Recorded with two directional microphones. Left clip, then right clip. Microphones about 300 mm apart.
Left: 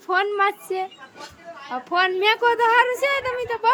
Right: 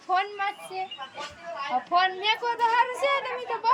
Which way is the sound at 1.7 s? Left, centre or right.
Centre.